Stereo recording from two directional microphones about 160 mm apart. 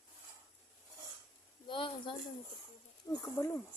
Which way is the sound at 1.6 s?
30° left (ahead or behind).